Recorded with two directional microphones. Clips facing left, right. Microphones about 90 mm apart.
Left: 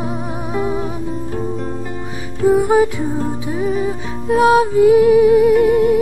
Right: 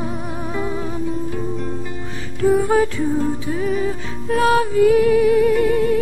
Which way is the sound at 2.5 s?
15° left (ahead or behind).